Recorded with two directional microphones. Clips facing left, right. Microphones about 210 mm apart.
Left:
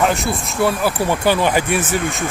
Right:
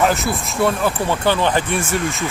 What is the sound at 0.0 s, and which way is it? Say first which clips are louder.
Speech: even; centre (ahead or behind).